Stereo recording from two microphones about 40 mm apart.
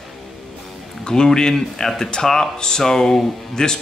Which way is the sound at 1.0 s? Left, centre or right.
Centre.